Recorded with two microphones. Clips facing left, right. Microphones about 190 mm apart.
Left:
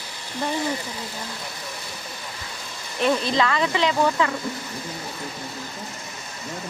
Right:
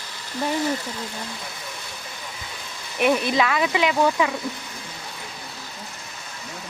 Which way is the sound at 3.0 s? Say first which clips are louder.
Right 1 dB; 15° right (ahead or behind).